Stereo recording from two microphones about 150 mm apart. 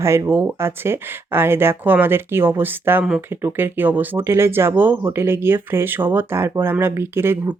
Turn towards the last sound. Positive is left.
turn(degrees=-15)  # may be behind; listen again after turning